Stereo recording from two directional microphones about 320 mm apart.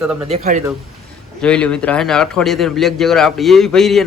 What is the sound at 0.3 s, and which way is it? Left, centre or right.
Speech, right.